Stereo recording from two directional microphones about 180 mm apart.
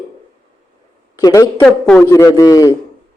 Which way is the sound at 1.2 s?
15° left (ahead or behind).